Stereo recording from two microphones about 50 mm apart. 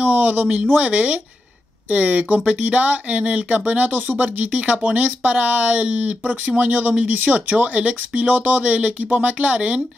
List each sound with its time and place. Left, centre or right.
0.0 s speech: right